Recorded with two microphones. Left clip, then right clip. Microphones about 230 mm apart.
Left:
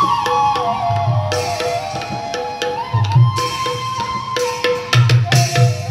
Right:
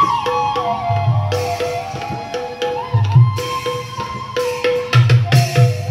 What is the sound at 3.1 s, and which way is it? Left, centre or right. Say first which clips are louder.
Music: left 2 dB; left.